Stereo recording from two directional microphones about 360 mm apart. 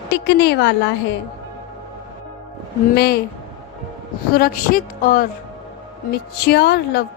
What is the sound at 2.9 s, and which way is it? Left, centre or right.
Music, left.